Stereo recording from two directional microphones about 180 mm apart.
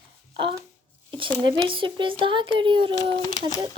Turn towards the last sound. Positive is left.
turn(degrees=20)  # may be behind; listen again after turning